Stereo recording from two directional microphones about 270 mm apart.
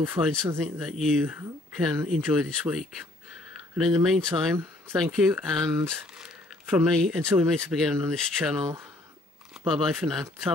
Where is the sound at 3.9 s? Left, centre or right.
Centre.